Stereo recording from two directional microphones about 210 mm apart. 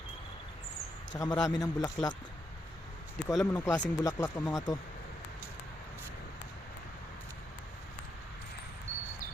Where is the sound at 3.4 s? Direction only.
5° left (ahead or behind).